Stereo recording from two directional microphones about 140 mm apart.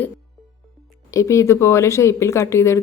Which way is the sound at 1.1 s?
20° left (ahead or behind).